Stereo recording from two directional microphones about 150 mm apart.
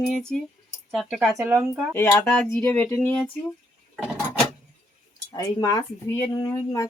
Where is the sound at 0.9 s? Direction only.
Centre (ahead or behind).